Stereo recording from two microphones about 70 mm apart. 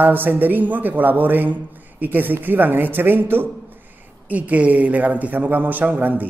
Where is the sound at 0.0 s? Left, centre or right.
Right.